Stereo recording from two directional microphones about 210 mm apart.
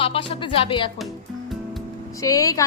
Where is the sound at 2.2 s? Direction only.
15° left (ahead or behind).